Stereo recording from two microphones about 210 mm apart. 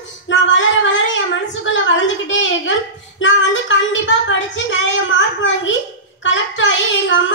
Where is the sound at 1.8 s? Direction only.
60° left (ahead or behind).